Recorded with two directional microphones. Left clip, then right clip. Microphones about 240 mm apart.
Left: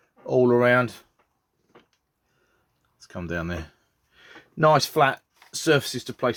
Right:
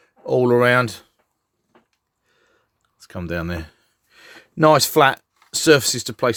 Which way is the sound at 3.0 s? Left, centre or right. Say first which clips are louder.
Right 4 dB; right.